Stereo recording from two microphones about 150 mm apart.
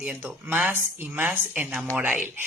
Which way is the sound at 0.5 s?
10° right (ahead or behind).